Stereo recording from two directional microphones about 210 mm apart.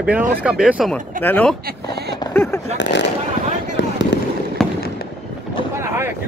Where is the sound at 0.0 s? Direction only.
5° right (ahead or behind).